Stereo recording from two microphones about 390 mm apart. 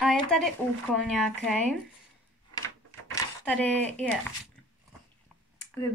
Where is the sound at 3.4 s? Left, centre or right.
Centre.